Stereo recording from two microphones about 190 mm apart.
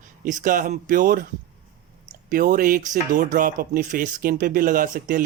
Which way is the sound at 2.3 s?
45° right (ahead or behind).